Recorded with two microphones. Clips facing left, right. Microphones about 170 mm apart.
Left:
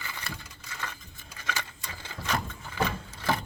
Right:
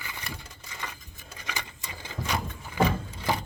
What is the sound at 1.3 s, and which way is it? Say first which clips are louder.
Sewing machine: left 2 dB; 15° right (ahead or behind).